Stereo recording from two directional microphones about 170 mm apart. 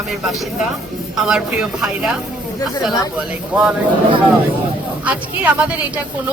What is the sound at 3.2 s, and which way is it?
Speech, 5° right (ahead or behind).